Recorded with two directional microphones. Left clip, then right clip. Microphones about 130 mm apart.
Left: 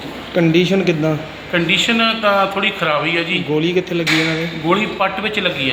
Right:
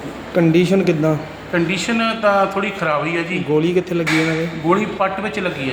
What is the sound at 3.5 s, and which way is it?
Speech, 15° right (ahead or behind).